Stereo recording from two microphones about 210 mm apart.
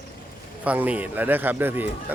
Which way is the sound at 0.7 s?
5° right (ahead or behind).